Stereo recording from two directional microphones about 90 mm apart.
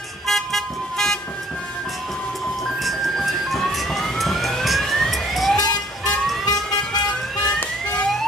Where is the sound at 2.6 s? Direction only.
Centre (ahead or behind).